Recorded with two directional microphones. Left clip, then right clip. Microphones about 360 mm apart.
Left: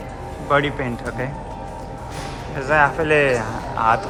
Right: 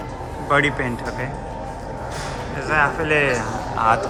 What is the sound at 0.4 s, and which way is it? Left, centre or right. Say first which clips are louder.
Speech: right 1 dB; centre.